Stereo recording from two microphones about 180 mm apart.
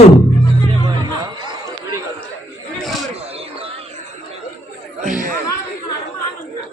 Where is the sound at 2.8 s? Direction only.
Centre (ahead or behind).